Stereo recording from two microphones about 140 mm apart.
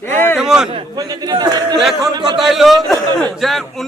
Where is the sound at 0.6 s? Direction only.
40° right (ahead or behind).